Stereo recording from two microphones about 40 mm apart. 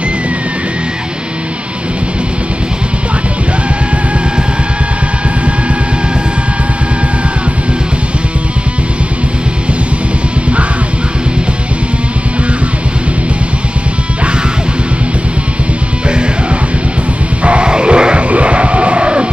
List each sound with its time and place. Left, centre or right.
17.4 s music: right